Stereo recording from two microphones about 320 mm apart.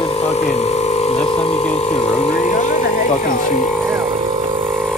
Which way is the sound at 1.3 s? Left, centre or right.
Centre.